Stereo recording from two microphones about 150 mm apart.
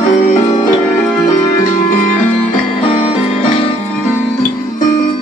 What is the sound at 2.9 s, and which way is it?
Music, 45° left (ahead or behind).